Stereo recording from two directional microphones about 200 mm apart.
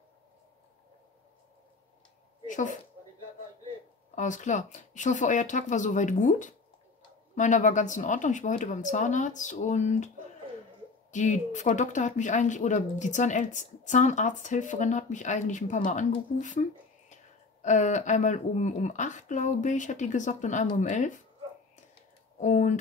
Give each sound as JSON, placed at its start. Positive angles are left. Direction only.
{"t": 2.4, "sound": "speech", "side_deg": 40}
{"t": 4.1, "sound": "speech", "side_deg": 40}
{"t": 22.4, "sound": "speech", "side_deg": 35}